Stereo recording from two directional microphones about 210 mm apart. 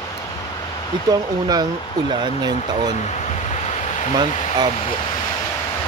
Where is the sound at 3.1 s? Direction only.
30° left (ahead or behind).